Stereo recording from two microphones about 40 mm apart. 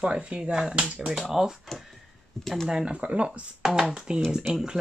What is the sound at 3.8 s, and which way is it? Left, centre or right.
Speech, centre.